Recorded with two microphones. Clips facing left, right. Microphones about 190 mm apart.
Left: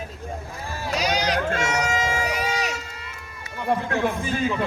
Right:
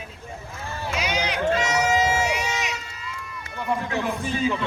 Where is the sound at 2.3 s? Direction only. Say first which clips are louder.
Left 1 dB; 35° left (ahead or behind).